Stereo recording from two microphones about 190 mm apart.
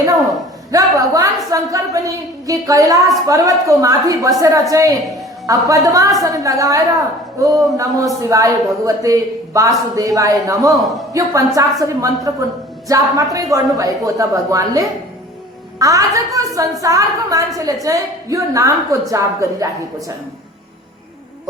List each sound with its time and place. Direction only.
0.7 s a woman's voice: 20° right (ahead or behind)
10.7 s a man's voice: centre (ahead or behind)
11.1 s a woman's voice: 15° right (ahead or behind)